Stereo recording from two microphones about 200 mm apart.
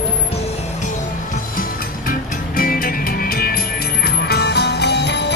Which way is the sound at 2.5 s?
45° left (ahead or behind).